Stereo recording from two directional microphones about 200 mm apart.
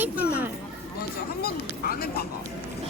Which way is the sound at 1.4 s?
50° left (ahead or behind).